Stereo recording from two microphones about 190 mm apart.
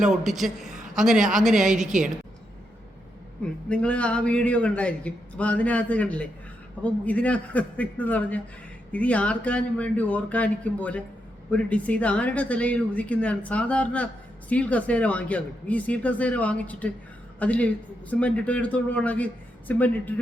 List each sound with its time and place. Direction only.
0.0 s speech: centre (ahead or behind)
0.7 s a sound: 40° right (ahead or behind)
1.0 s speech: centre (ahead or behind)
3.7 s speech: 5° left (ahead or behind)